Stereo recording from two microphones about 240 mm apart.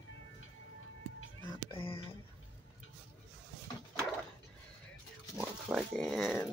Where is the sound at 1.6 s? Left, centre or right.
Left.